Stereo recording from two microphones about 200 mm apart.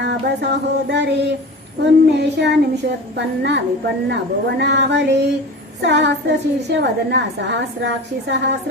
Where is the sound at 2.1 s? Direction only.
60° right (ahead or behind).